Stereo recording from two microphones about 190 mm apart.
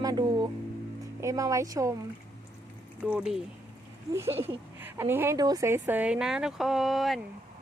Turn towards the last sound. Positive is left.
turn(degrees=0)  # may be behind; listen again after turning